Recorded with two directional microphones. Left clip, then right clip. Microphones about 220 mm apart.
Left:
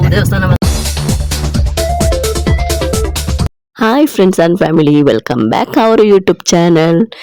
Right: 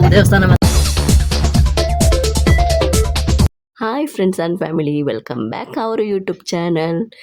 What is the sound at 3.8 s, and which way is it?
Speech, 35° left (ahead or behind).